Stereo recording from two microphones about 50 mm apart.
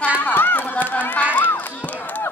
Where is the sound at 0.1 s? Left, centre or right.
Left.